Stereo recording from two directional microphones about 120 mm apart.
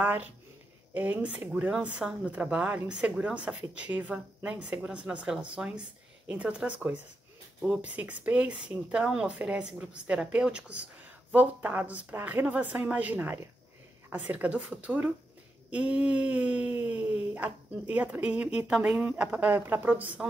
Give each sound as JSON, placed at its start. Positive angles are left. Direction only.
{"t": 0.0, "sound": "speech", "side_deg": -15}